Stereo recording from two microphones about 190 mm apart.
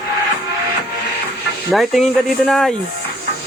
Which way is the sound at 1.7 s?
Centre (ahead or behind).